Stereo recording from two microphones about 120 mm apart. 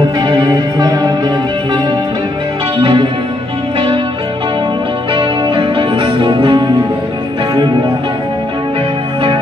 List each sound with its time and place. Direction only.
0.2 s music: 40° right (ahead or behind)
5.1 s music: 40° right (ahead or behind)